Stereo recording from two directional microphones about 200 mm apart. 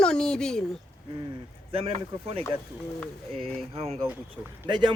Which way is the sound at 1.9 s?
30° right (ahead or behind).